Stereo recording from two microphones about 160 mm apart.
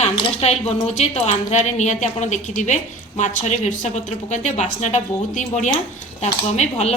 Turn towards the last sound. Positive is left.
turn(degrees=45)  # may be behind; listen again after turning